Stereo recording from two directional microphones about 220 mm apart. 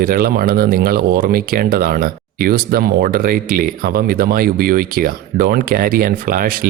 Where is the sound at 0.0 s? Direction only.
40° right (ahead or behind).